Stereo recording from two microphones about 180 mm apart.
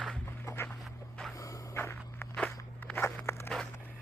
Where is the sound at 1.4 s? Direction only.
15° left (ahead or behind).